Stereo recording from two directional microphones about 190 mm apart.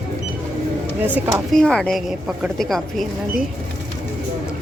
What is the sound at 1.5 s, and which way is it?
A woman's voice, 5° left (ahead or behind).